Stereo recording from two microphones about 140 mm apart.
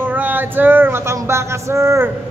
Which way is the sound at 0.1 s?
15° right (ahead or behind).